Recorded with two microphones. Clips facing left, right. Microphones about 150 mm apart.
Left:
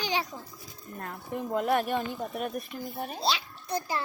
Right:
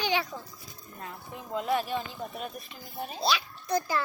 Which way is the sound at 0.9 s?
55° left (ahead or behind).